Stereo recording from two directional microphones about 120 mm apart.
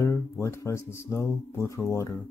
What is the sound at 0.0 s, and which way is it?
Speech, 25° left (ahead or behind).